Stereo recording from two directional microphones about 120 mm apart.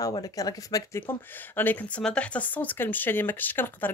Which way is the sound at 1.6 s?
15° left (ahead or behind).